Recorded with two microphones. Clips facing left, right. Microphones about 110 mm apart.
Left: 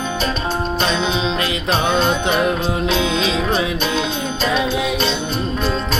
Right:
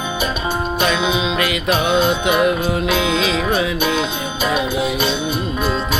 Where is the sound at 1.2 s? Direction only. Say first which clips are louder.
Right 1 dB; 25° left (ahead or behind).